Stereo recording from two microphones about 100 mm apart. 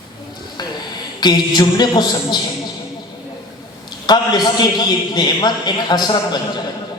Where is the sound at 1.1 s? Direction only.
45° left (ahead or behind).